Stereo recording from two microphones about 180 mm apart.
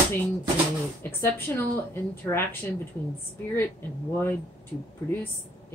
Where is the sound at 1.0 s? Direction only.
10° left (ahead or behind).